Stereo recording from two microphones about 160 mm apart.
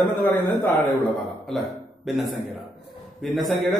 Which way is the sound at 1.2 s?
Centre (ahead or behind).